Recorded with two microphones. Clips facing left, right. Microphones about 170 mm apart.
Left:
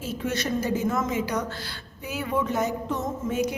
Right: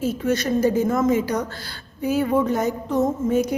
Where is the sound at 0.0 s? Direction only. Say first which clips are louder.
Right 7 dB; 45° right (ahead or behind).